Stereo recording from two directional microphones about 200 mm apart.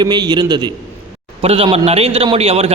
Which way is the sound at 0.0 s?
20° right (ahead or behind).